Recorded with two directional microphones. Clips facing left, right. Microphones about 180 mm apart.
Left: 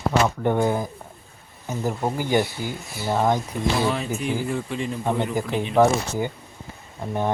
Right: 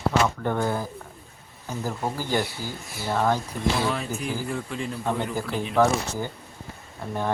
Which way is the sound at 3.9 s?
Centre (ahead or behind).